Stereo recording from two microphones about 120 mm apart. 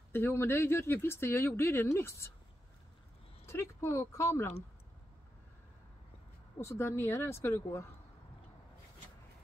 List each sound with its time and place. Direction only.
0.1 s speech: 20° left (ahead or behind)
3.4 s speech: 20° left (ahead or behind)
6.6 s speech: 20° left (ahead or behind)